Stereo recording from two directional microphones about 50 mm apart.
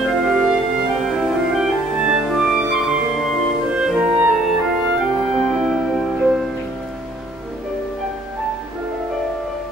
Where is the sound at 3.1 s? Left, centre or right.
Centre.